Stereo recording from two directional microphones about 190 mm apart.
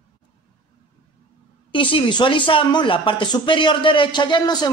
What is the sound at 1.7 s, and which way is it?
A woman's voice, 25° left (ahead or behind).